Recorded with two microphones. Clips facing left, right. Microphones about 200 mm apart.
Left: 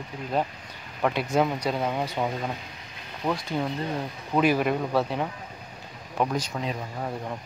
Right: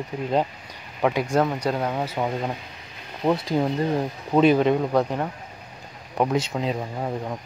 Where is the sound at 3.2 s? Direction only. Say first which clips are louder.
Right 6 dB; 30° right (ahead or behind).